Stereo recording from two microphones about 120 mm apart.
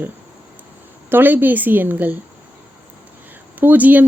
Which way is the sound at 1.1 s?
15° right (ahead or behind).